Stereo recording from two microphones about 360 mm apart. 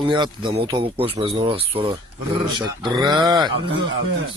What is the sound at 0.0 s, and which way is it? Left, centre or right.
Speech, centre.